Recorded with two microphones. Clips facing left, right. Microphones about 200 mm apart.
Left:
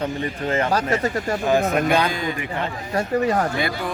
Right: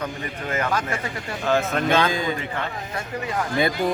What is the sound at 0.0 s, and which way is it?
Speech, 30° left (ahead or behind).